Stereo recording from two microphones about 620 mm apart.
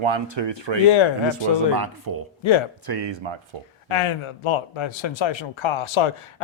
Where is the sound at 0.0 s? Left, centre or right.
Right.